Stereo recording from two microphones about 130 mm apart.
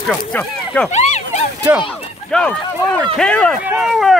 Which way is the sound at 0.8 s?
60° left (ahead or behind).